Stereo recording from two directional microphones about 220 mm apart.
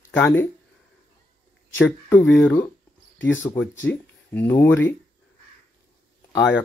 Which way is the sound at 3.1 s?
55° left (ahead or behind).